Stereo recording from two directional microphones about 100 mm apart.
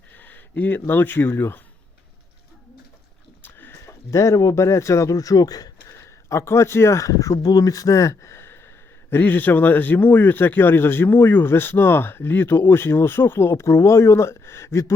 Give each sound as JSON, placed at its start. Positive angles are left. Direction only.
{"t": 0.2, "sound": "speech", "side_deg": 20}
{"t": 3.4, "sound": "speech", "side_deg": 20}